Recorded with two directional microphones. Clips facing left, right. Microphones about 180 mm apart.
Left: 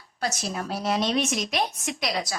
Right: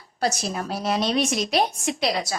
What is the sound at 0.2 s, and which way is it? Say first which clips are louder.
A woman's voice: right 4 dB; 35° right (ahead or behind).